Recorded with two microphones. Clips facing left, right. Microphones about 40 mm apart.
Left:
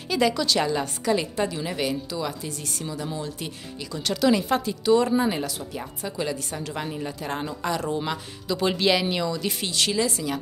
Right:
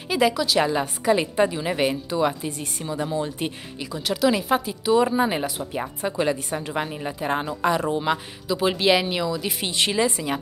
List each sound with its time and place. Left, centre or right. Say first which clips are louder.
0.1 s a woman's voice: right 2 dB; centre
0.7 s speech: right 3 dB; centre
3.9 s speech: even; centre
8.5 s a woman's voice: right 2 dB; centre
9.7 s speech: right 3 dB; right